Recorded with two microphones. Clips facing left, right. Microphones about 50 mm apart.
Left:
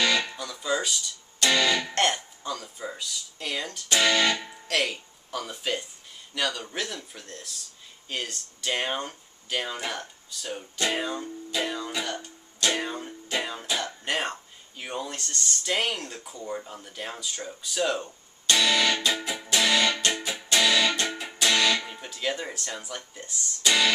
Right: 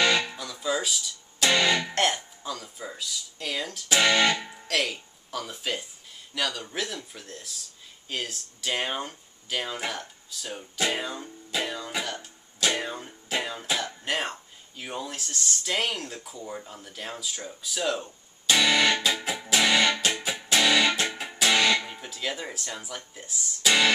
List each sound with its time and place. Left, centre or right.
0.2 s music: centre
1.5 s speech: centre
1.8 s speech: centre
12.0 s music: centre
17.5 s speech: centre
18.5 s music: centre
21.7 s speech: centre